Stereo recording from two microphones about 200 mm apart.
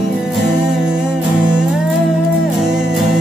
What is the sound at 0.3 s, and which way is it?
Music, centre (ahead or behind).